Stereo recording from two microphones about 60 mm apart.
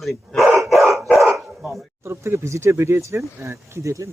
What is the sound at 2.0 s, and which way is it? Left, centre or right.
Speech, right.